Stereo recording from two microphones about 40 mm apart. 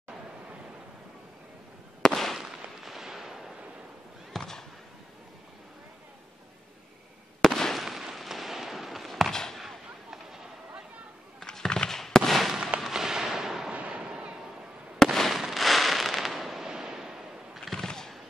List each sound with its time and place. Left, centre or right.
2.0 s fireworks: centre
2.3 s firecracker: centre
4.4 s a sound: centre
7.4 s fireworks: centre
7.8 s fireworks: centre
9.3 s fireworks: centre
9.6 s a sound: centre
11.3 s fireworks: centre
12.8 s fireworks: centre
13.7 s artillery fire: right
15.0 s fireworks: centre
15.3 s fireworks: centre
17.6 s fireworks: centre